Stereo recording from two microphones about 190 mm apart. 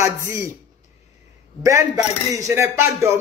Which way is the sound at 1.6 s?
15° right (ahead or behind).